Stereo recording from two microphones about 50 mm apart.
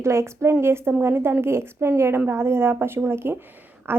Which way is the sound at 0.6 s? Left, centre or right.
Right.